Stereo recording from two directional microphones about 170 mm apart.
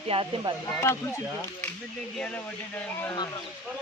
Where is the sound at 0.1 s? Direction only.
30° right (ahead or behind).